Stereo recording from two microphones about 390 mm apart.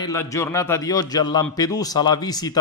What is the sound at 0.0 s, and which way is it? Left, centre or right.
Speech, centre.